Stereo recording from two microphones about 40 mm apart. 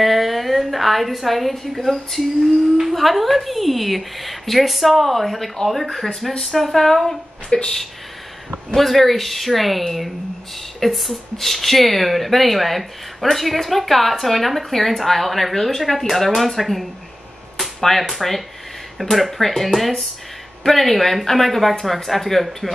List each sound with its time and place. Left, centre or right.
0.0 s a woman's voice: centre
7.4 s a woman's voice: centre
8.7 s speech: centre